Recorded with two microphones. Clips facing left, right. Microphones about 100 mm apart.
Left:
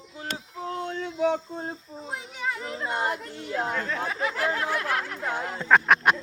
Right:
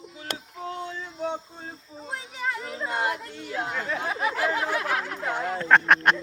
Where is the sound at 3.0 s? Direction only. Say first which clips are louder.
Right 2 dB; 40° left (ahead or behind).